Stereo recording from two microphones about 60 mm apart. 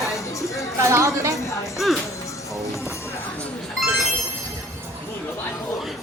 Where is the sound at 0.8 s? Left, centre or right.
Right.